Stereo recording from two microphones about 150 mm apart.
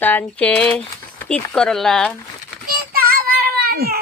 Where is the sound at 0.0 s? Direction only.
10° left (ahead or behind).